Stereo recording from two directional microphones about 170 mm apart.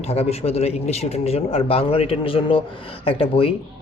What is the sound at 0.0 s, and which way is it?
A man's voice, 35° left (ahead or behind).